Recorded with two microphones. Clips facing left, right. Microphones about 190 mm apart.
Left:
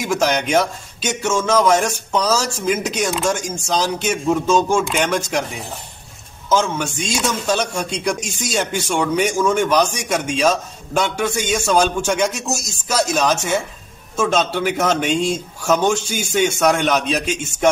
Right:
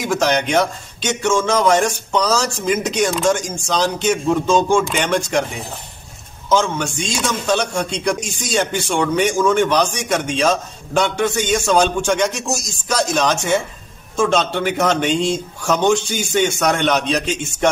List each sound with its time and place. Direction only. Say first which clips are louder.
0.1 s a man's voice: even; 5° left (ahead or behind)
6.5 s a man's voice: right 1 dB; 5° left (ahead or behind)